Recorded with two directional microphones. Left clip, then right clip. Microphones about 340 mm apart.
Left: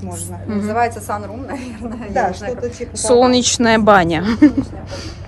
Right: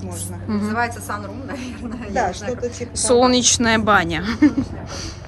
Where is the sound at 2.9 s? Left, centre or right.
Centre.